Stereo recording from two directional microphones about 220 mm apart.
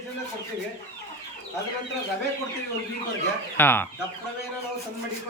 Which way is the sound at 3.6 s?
10° left (ahead or behind).